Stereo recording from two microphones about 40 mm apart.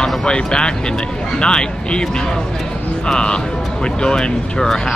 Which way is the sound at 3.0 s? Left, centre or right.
Left.